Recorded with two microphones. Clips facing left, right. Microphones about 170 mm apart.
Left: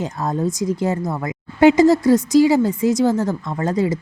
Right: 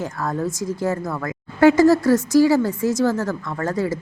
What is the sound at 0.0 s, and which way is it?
Speech, 20° left (ahead or behind).